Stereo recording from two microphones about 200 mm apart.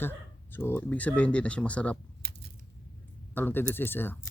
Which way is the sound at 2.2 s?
55° right (ahead or behind).